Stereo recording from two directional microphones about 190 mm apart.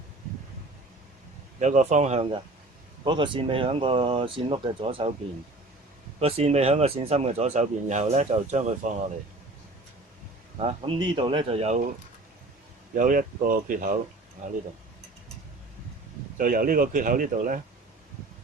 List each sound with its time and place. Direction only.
1.5 s speech: 40° right (ahead or behind)
3.0 s speech: 25° right (ahead or behind)
6.1 s speech: 30° right (ahead or behind)
10.6 s speech: 30° right (ahead or behind)
13.0 s speech: 45° right (ahead or behind)
16.4 s speech: 45° right (ahead or behind)